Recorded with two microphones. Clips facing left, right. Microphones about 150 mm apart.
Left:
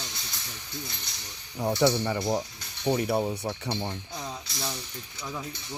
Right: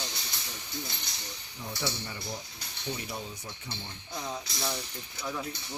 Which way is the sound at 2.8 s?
65° left (ahead or behind).